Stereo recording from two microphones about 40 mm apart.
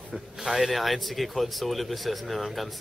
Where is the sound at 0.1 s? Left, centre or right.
Centre.